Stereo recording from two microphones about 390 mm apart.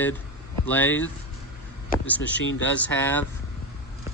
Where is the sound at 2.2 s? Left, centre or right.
Left.